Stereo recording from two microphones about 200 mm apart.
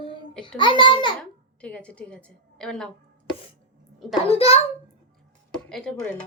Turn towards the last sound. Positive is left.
turn(degrees=5)  # may be behind; listen again after turning